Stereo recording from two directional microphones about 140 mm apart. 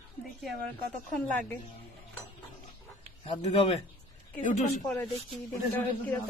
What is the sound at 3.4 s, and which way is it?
Speech, 45° left (ahead or behind).